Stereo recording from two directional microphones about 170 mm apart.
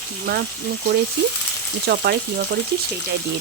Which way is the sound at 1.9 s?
65° right (ahead or behind).